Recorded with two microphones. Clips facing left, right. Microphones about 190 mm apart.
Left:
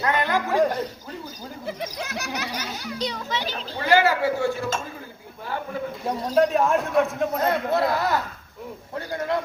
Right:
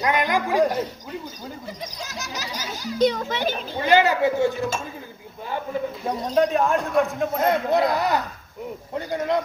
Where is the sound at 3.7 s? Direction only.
20° right (ahead or behind).